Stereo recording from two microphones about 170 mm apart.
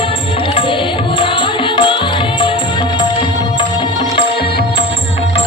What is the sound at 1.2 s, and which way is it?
Music, 30° left (ahead or behind).